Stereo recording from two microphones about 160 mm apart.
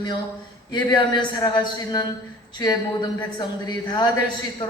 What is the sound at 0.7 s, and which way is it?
A woman's voice, 25° left (ahead or behind).